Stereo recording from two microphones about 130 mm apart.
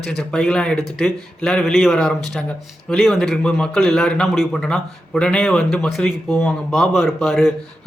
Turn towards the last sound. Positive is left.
turn(degrees=0)  # may be behind; listen again after turning